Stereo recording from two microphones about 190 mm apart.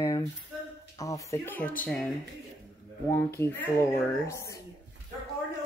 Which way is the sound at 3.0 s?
15° left (ahead or behind).